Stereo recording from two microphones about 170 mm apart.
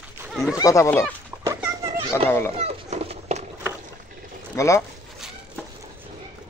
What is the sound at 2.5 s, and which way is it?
Cat, 35° right (ahead or behind).